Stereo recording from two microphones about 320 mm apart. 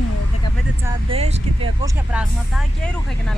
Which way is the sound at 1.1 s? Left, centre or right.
Centre.